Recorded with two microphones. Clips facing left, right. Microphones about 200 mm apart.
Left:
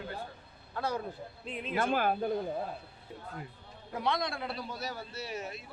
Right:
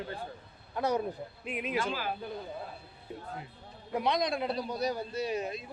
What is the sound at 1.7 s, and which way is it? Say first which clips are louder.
Speech: left 7 dB; 55° left (ahead or behind).